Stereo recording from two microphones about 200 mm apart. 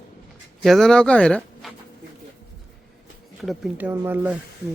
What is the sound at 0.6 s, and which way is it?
Speech, centre (ahead or behind).